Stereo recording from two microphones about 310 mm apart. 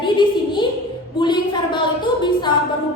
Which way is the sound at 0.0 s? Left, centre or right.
Centre.